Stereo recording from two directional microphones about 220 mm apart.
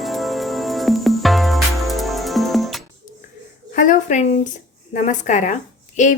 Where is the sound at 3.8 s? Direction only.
35° left (ahead or behind).